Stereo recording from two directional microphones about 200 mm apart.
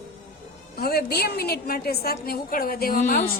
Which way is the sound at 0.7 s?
50° left (ahead or behind).